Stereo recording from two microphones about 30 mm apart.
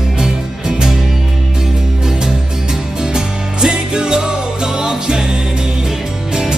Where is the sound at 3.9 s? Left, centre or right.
Right.